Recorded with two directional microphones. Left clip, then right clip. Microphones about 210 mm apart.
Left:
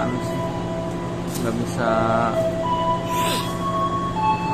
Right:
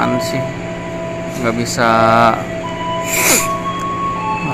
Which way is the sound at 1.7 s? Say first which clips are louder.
Right 9 dB; 15° right (ahead or behind).